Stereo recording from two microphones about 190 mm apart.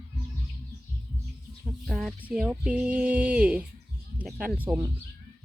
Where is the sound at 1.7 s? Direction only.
Centre (ahead or behind).